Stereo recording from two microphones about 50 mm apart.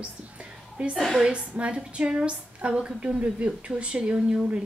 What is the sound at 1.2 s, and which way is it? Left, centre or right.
A woman's voice, right.